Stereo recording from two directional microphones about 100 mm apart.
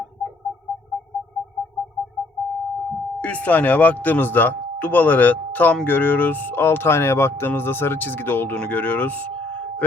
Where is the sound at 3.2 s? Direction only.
15° left (ahead or behind).